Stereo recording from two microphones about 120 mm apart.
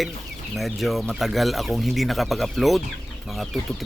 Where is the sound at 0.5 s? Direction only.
Centre (ahead or behind).